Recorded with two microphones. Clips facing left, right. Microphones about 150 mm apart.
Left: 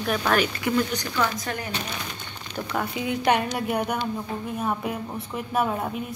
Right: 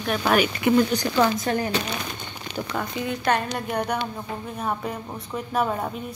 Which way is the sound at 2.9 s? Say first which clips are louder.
Left 1 dB; 15° left (ahead or behind).